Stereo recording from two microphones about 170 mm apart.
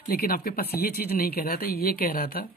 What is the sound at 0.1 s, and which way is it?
Speech, 60° left (ahead or behind).